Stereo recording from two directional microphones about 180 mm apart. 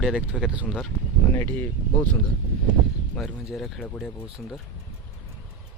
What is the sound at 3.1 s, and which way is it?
Speech, centre (ahead or behind).